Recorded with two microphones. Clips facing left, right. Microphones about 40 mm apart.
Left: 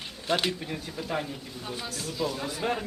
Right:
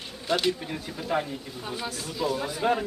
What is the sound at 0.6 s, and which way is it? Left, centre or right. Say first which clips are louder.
A man's voice: right 1 dB; centre.